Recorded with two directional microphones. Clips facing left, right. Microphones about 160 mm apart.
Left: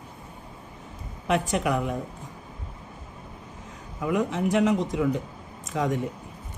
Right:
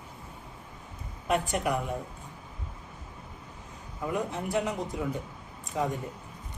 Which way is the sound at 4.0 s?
90° left.